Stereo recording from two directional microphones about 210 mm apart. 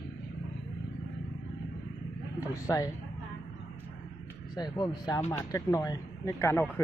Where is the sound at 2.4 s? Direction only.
15° left (ahead or behind).